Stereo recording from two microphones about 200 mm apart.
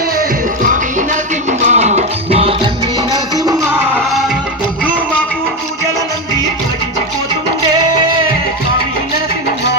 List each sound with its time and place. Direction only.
0.6 s music: 40° right (ahead or behind)
3.1 s music: 20° right (ahead or behind)